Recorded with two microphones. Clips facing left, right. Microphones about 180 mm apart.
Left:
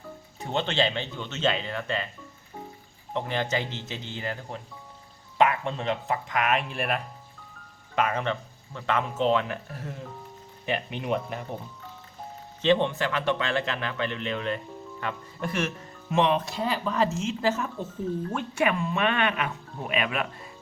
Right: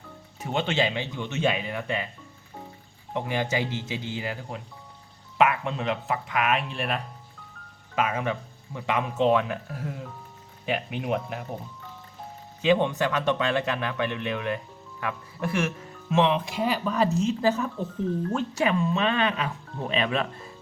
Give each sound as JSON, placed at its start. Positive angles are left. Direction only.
{"t": 0.3, "sound": "speech", "side_deg": -10}
{"t": 3.1, "sound": "speech", "side_deg": -10}
{"t": 12.6, "sound": "speech", "side_deg": -10}
{"t": 18.3, "sound": "speech", "side_deg": -30}